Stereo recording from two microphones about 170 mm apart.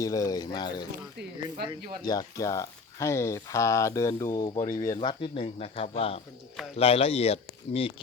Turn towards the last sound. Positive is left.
turn(degrees=35)  # may be behind; listen again after turning